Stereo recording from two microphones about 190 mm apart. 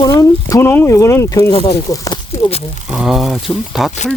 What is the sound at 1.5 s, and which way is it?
Speech, 30° left (ahead or behind).